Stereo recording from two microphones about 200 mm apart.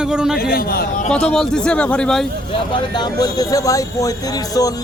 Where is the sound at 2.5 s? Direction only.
25° left (ahead or behind).